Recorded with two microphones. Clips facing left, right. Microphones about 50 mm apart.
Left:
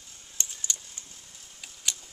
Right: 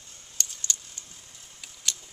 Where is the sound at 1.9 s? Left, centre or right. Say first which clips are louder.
Right 1 dB; centre.